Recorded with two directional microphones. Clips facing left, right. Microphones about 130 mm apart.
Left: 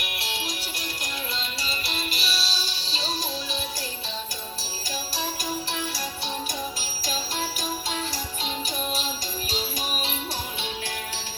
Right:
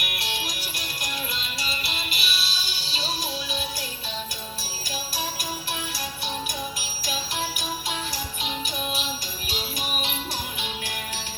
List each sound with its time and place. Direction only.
0.0 s music: 25° left (ahead or behind)
9.5 s music: 35° left (ahead or behind)